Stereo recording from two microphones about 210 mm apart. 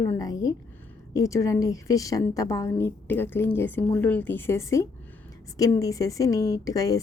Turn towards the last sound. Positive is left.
turn(degrees=15)  # may be behind; listen again after turning